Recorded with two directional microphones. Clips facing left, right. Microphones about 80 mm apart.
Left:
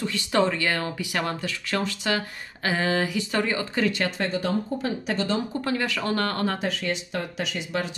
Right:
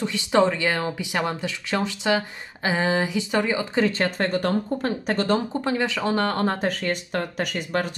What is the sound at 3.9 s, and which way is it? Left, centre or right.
Speech, right.